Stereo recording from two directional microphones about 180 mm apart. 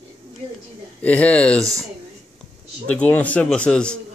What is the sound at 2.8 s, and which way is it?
A man's voice, 5° left (ahead or behind).